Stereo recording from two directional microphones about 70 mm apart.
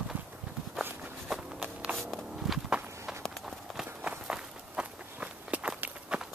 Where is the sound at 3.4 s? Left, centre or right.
Centre.